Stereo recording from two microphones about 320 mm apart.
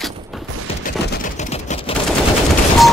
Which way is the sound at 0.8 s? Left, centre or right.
Left.